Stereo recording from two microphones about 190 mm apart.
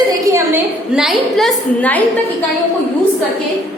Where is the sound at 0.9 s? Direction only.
Centre (ahead or behind).